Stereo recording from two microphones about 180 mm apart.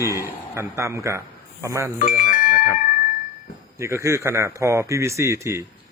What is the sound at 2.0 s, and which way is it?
Doorbell, 50° left (ahead or behind).